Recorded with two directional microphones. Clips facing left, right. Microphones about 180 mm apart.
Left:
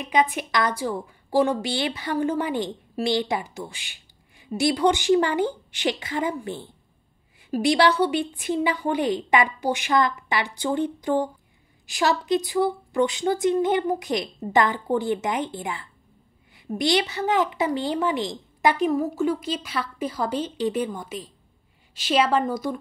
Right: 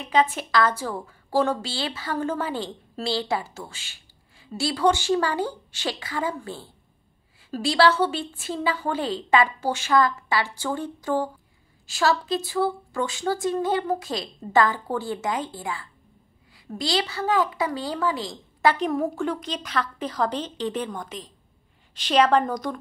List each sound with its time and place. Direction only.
0.1 s a woman's voice: 15° left (ahead or behind)
18.9 s a woman's voice: 5° left (ahead or behind)